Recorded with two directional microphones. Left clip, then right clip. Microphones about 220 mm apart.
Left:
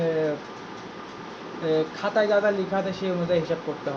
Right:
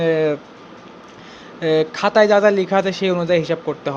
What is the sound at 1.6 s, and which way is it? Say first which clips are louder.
Speech: right 8 dB; 40° right (ahead or behind).